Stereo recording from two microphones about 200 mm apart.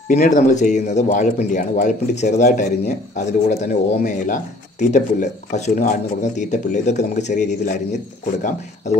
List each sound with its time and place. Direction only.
0.1 s speech: 40° left (ahead or behind)